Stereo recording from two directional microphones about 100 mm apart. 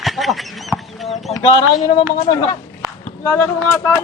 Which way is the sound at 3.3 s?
20° left (ahead or behind).